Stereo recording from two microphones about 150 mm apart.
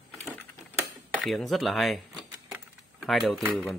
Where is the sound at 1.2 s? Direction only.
Centre (ahead or behind).